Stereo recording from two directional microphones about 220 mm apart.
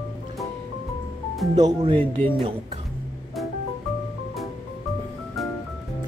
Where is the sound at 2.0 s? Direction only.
10° left (ahead or behind).